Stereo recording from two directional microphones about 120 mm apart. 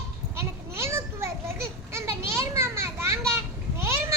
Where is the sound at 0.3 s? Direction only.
20° right (ahead or behind).